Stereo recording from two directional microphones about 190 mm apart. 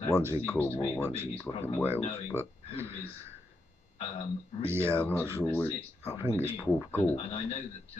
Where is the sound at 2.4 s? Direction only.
10° right (ahead or behind).